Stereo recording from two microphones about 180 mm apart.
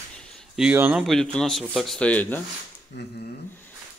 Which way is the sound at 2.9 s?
70° left (ahead or behind).